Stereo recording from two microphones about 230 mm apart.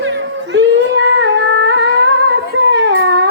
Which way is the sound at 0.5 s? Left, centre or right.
Right.